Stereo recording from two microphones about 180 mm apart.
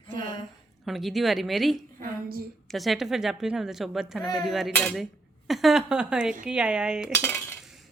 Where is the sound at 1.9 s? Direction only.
55° right (ahead or behind).